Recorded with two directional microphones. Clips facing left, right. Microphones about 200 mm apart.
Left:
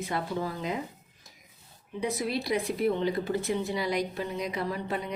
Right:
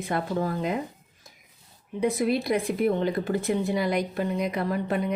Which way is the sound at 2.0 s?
55° right (ahead or behind).